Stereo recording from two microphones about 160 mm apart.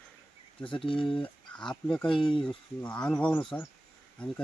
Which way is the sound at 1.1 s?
5° left (ahead or behind).